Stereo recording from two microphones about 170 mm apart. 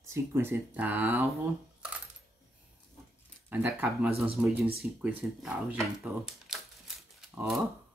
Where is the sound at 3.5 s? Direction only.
10° right (ahead or behind).